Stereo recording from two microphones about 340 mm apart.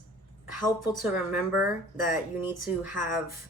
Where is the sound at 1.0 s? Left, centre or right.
Centre.